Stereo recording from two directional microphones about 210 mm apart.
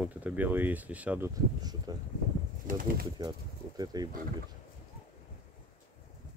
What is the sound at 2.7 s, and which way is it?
Speech, 40° right (ahead or behind).